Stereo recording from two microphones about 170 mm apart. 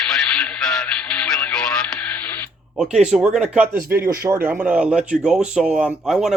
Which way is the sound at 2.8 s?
5° right (ahead or behind).